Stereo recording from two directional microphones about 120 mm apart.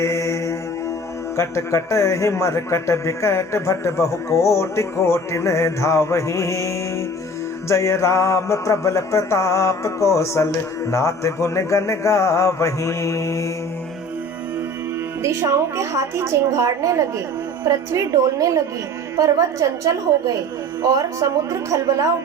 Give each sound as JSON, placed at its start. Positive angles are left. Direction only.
{"t": 0.0, "sound": "mantra", "side_deg": 25}
{"t": 1.4, "sound": "speech", "side_deg": 25}
{"t": 15.2, "sound": "a woman's voice", "side_deg": -25}